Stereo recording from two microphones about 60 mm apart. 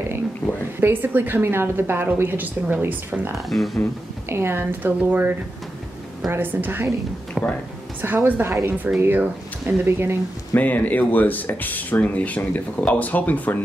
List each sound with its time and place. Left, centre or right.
0.7 s a woman's voice: right
3.4 s speech: centre
4.3 s a woman's voice: right
6.3 s a woman's voice: right
7.4 s a sound: centre
8.0 s a woman's voice: right
8.9 s speech: right
9.7 s a woman's voice: right
10.5 s speech: left